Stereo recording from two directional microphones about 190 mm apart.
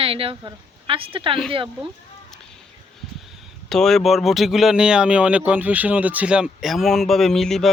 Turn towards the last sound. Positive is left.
turn(degrees=0)  # may be behind; listen again after turning